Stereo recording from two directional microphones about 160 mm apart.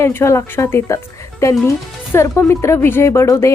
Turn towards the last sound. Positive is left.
turn(degrees=20)  # may be behind; listen again after turning